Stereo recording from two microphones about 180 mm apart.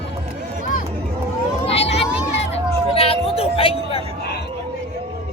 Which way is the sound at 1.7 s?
35° left (ahead or behind).